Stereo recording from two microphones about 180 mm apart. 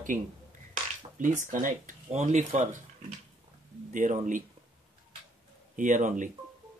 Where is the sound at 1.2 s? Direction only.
45° right (ahead or behind).